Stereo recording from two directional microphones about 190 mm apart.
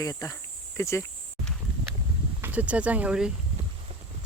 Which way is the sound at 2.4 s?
10° right (ahead or behind).